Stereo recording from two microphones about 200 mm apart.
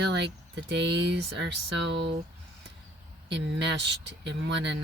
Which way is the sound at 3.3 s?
60° right (ahead or behind).